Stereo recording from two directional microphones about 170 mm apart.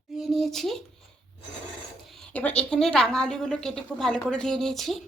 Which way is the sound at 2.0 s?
5° left (ahead or behind).